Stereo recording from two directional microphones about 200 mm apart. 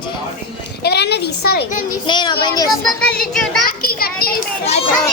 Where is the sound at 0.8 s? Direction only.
55° left (ahead or behind).